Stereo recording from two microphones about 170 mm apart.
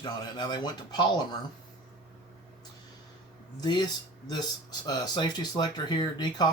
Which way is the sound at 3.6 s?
25° left (ahead or behind).